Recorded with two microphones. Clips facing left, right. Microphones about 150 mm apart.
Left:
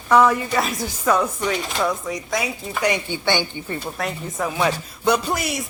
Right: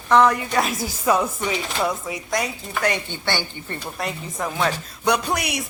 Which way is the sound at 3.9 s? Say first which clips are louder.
Even; centre (ahead or behind).